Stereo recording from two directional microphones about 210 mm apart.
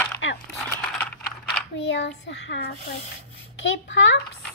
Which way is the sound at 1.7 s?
55° left (ahead or behind).